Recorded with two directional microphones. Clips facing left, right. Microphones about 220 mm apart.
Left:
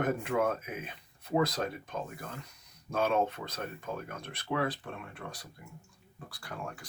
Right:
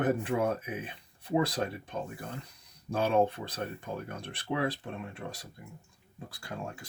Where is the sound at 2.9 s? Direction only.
30° right (ahead or behind).